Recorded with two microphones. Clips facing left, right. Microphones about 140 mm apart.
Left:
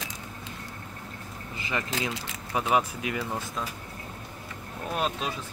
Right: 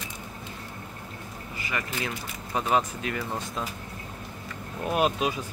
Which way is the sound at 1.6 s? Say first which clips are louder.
Left 1 dB; 25° left (ahead or behind).